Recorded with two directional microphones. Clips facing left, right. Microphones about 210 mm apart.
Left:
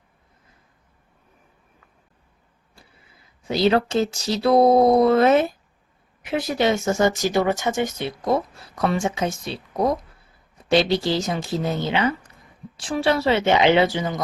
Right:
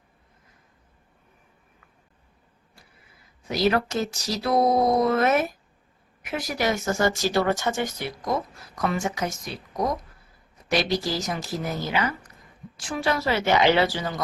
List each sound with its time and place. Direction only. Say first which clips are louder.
3.4 s speech: left 4 dB; 25° left (ahead or behind)